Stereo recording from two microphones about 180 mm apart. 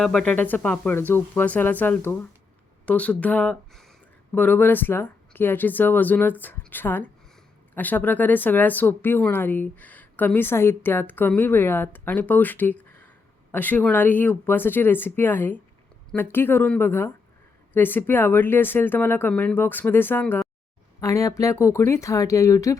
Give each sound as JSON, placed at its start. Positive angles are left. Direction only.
{"t": 0.0, "sound": "speech", "side_deg": 5}